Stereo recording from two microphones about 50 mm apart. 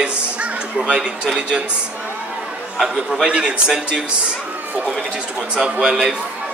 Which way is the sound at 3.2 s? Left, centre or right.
Right.